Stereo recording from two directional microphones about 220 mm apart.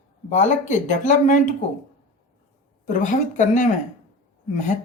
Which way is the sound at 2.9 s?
35° left (ahead or behind).